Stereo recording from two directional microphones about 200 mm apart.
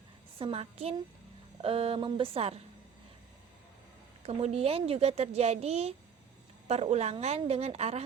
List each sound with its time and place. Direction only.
0.3 s speech: 30° right (ahead or behind)
4.2 s a woman's voice: 30° right (ahead or behind)